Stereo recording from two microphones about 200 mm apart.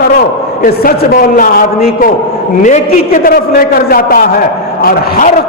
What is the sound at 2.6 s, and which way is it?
A man's voice, 40° left (ahead or behind).